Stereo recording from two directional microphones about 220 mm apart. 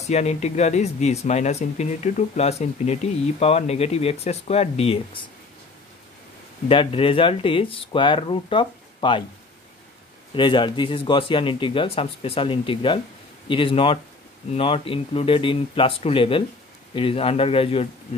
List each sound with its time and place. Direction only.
0.0 s speech: 30° left (ahead or behind)
6.7 s speech: 25° left (ahead or behind)
10.3 s speech: 20° left (ahead or behind)